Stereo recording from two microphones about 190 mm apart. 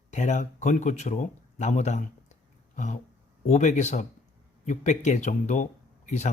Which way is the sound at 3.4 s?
40° left (ahead or behind).